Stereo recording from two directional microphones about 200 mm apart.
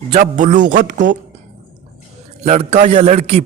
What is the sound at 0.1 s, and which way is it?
A man's voice, 40° right (ahead or behind).